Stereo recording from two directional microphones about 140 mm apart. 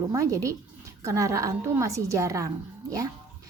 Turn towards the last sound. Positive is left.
turn(degrees=-25)  # may be behind; listen again after turning